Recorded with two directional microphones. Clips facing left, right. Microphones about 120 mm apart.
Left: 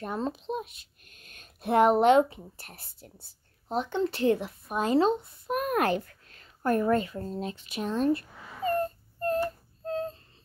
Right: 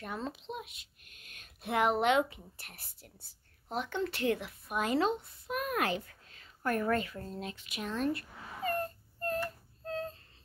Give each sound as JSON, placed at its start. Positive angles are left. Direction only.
{"t": 0.0, "sound": "speech", "side_deg": 35}
{"t": 5.5, "sound": "a child's voice", "side_deg": 45}
{"t": 6.6, "sound": "a sound", "side_deg": 25}